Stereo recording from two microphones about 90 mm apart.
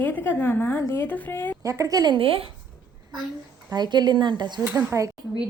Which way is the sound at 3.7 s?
50° right (ahead or behind).